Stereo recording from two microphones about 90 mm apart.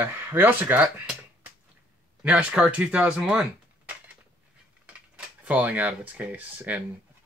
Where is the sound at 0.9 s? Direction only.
15° right (ahead or behind).